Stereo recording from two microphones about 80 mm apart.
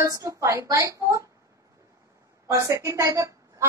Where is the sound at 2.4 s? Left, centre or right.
Right.